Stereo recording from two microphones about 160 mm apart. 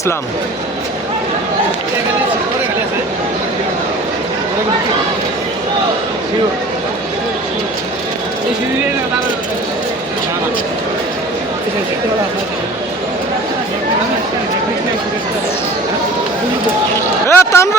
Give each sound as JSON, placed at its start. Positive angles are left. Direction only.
{"t": 17.2, "sound": "a man's voice", "side_deg": 15}